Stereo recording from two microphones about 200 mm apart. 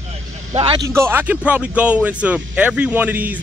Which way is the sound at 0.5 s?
20° right (ahead or behind).